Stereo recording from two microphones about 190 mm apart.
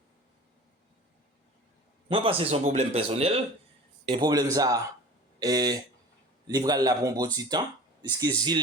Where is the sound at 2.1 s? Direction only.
30° right (ahead or behind).